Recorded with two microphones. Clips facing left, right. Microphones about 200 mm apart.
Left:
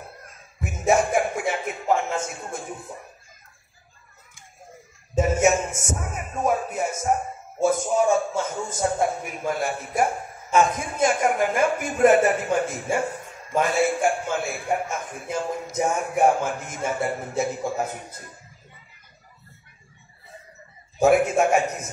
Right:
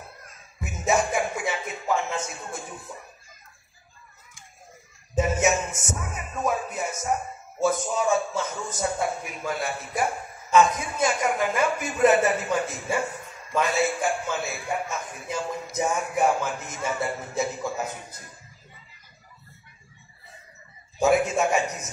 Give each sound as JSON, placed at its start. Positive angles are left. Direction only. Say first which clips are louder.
{"t": 0.6, "sound": "music", "louder": "left 3 dB", "side_deg": 50}
{"t": 5.1, "sound": "music", "louder": "left 3 dB", "side_deg": 50}
{"t": 7.6, "sound": "a man's voice", "louder": "left 4 dB", "side_deg": 50}
{"t": 21.0, "sound": "a man's voice", "louder": "left 3 dB", "side_deg": 55}